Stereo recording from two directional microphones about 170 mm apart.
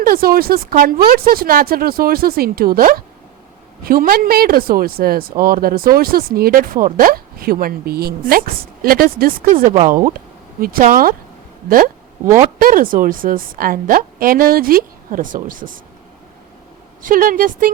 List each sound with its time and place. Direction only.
0.0 s speech: 60° right (ahead or behind)
9.7 s speech: 40° right (ahead or behind)
10.6 s a woman's voice: 55° right (ahead or behind)
17.0 s speech: 55° right (ahead or behind)